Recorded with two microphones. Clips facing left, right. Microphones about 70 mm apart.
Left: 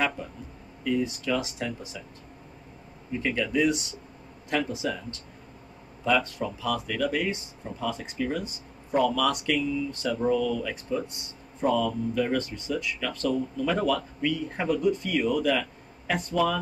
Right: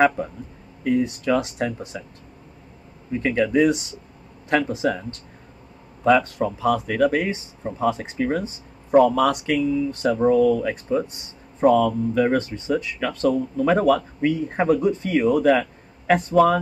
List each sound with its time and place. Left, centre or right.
0.8 s speech: right
3.1 s speech: right
6.0 s speech: right